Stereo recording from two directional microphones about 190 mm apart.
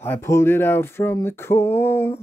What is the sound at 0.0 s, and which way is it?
Speech, 15° left (ahead or behind).